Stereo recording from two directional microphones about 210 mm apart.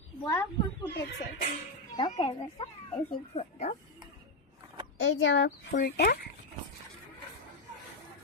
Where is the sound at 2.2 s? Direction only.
20° left (ahead or behind).